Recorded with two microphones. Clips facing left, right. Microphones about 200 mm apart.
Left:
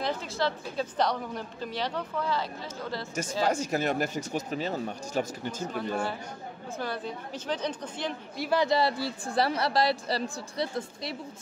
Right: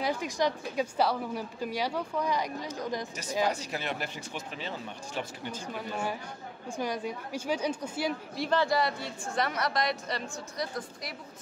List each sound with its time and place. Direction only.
0.0 s a woman's voice: 15° right (ahead or behind)
3.4 s speech: 45° left (ahead or behind)
5.8 s a woman's voice: 10° right (ahead or behind)
8.5 s a woman's voice: 25° left (ahead or behind)